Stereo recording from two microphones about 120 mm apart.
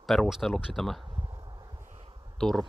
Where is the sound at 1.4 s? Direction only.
35° right (ahead or behind).